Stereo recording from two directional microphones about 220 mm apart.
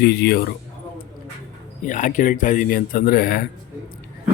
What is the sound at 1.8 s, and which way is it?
Speech, 35° left (ahead or behind).